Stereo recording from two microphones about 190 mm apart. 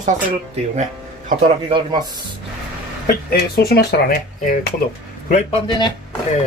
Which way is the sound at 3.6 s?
55° left (ahead or behind).